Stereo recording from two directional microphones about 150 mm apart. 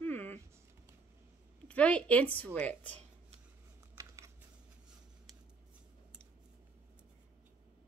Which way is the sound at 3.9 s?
20° right (ahead or behind).